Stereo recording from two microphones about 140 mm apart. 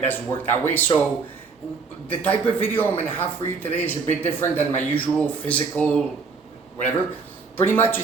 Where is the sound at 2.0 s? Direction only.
10° left (ahead or behind).